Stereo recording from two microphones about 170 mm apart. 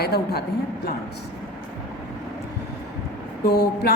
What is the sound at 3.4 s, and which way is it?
Speech, 70° left (ahead or behind).